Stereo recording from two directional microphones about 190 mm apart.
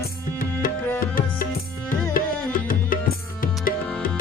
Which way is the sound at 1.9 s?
45° left (ahead or behind).